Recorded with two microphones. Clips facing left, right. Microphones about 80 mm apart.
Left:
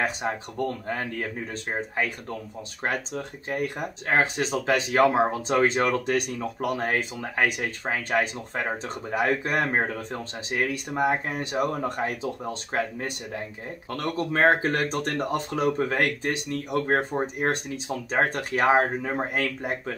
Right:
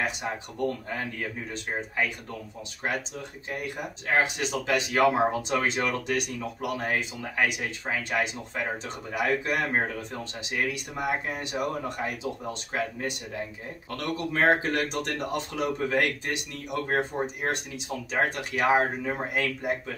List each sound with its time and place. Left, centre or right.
1.5 s speech: left